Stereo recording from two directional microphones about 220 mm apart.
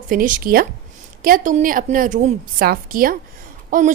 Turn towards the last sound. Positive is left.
turn(degrees=-35)  # may be behind; listen again after turning